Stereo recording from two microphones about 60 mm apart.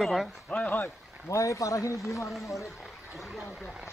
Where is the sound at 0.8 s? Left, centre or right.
Left.